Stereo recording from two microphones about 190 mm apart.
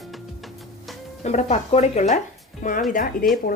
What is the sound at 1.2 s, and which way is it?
Speech, 35° left (ahead or behind).